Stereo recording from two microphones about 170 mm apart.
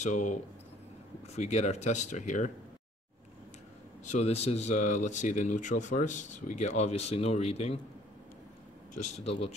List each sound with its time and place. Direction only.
0.0 s speech: 45° left (ahead or behind)
4.0 s speech: 40° left (ahead or behind)
8.9 s speech: 35° left (ahead or behind)